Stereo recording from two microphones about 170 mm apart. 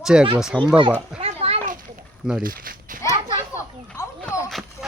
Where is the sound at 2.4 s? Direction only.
55° right (ahead or behind).